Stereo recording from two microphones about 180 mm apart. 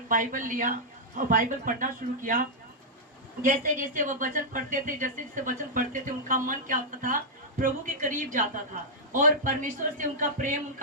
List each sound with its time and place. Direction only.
0.1 s speech: 45° right (ahead or behind)
3.4 s speech: 45° right (ahead or behind)